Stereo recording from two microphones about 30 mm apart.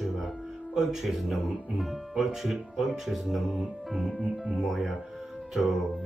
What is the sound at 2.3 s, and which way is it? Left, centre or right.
Speech, centre.